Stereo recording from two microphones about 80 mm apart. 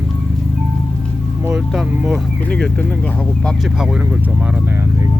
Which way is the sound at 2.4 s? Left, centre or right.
Centre.